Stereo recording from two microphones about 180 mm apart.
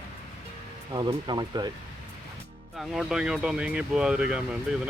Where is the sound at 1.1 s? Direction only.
25° right (ahead or behind).